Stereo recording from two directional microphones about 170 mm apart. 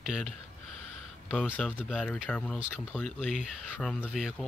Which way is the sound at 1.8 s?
Centre (ahead or behind).